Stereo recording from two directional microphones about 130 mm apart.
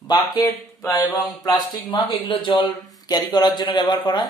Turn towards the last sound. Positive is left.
turn(degrees=35)  # may be behind; listen again after turning